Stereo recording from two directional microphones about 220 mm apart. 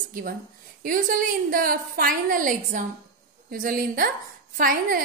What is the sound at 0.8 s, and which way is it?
A woman's voice, 40° right (ahead or behind).